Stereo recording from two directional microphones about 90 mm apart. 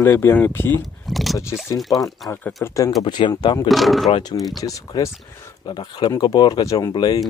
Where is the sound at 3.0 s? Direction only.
55° left (ahead or behind).